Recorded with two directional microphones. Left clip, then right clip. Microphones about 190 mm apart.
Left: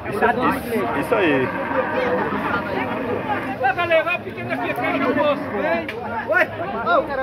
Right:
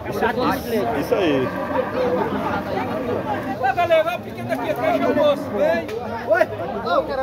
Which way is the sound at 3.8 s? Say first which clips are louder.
Right 3 dB; 65° right (ahead or behind).